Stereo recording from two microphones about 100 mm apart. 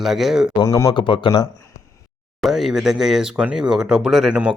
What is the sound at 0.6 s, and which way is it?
Speech, 30° left (ahead or behind).